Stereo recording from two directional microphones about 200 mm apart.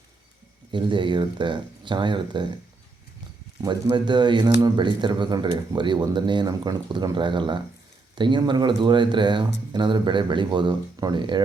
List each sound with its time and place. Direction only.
0.7 s speech: 25° right (ahead or behind)
3.6 s speech: 20° right (ahead or behind)